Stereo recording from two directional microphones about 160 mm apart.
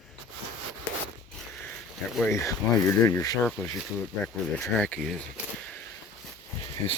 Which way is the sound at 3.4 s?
5° left (ahead or behind).